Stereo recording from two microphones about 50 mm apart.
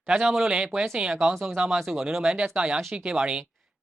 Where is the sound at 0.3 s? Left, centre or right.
Centre.